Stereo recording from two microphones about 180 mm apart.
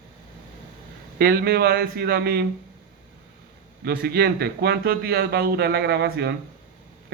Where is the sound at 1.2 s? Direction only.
60° right (ahead or behind).